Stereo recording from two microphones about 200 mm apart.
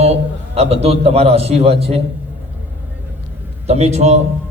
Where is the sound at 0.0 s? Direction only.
30° right (ahead or behind).